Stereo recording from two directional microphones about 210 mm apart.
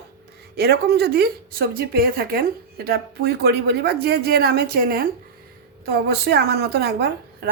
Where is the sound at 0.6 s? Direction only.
50° right (ahead or behind).